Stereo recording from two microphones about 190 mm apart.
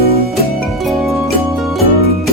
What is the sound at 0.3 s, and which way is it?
Music, centre (ahead or behind).